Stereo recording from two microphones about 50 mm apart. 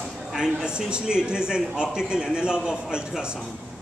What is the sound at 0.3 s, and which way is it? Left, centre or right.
Speech, centre.